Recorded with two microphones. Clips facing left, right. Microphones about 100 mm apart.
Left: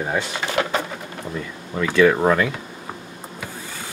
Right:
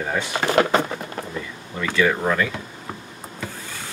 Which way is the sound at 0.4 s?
50° right (ahead or behind).